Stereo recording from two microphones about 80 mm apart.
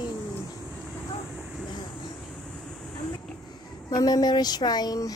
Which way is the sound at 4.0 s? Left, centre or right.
Left.